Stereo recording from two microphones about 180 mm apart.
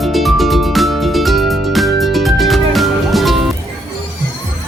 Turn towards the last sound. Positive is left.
turn(degrees=0)  # may be behind; listen again after turning